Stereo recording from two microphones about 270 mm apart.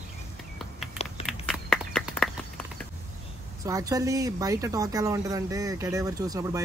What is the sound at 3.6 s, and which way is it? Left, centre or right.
Speech, centre.